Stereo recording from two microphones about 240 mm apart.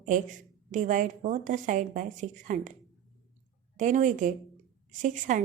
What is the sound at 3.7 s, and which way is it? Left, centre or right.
A woman's voice, right.